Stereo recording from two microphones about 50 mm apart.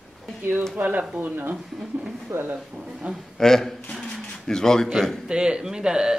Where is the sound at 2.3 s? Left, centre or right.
Right.